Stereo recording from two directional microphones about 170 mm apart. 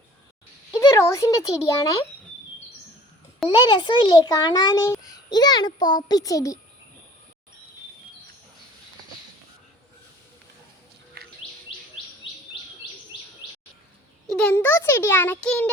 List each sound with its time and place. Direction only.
0.8 s a child's voice: 20° left (ahead or behind)
3.5 s a child's voice: 25° left (ahead or behind)
11.2 s bird: 65° right (ahead or behind)
14.3 s a sound: 5° left (ahead or behind)